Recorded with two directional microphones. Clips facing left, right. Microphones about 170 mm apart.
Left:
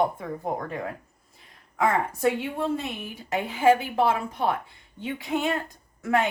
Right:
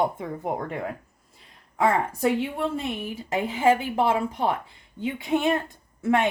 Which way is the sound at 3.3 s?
25° right (ahead or behind).